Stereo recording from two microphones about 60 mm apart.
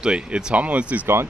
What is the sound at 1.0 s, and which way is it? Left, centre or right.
Speech, right.